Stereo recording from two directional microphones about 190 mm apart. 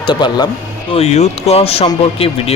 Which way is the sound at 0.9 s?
35° left (ahead or behind).